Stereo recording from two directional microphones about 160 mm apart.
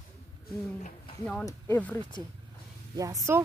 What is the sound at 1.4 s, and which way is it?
Speech, 10° left (ahead or behind).